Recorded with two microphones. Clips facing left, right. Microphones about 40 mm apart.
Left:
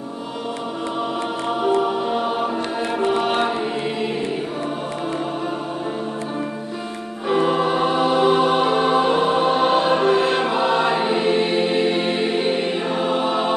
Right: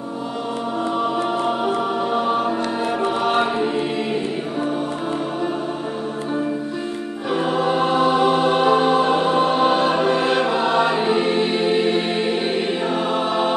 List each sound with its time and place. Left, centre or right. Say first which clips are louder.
1.6 s music: left 2 dB; centre
3.1 s chant: left 2 dB; centre
7.6 s music: right 1 dB; centre